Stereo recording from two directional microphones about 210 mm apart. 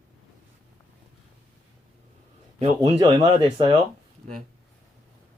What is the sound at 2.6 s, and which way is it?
Speech, 25° right (ahead or behind).